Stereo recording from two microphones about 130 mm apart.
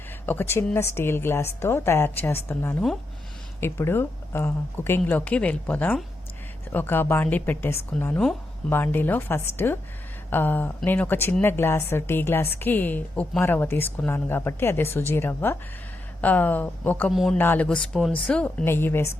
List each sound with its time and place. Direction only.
0.3 s a woman's voice: 15° left (ahead or behind)
17.1 s a man's voice: centre (ahead or behind)
17.3 s a woman's voice: 15° left (ahead or behind)